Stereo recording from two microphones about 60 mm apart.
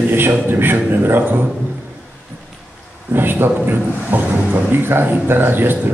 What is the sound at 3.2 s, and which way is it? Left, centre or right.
A man's voice, right.